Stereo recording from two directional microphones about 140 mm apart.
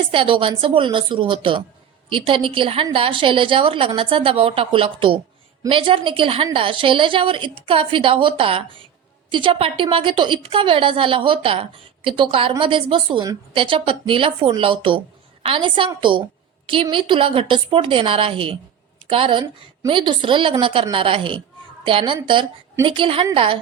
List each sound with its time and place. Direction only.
0.1 s a woman's voice: 40° right (ahead or behind)